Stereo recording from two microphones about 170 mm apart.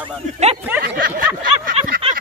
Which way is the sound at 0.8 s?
60° right (ahead or behind).